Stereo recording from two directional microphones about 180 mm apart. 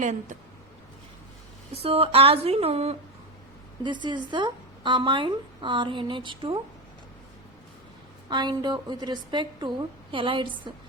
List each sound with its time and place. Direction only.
0.0 s speech: 45° right (ahead or behind)
1.7 s a woman's voice: 30° right (ahead or behind)
8.3 s a woman's voice: 25° right (ahead or behind)